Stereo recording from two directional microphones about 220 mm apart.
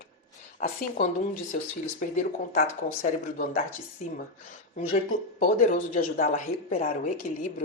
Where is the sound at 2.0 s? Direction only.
35° left (ahead or behind).